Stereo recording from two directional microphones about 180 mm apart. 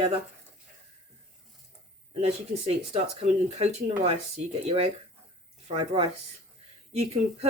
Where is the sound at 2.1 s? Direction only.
35° right (ahead or behind).